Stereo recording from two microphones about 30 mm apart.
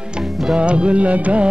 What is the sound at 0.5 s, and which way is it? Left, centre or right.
Music, right.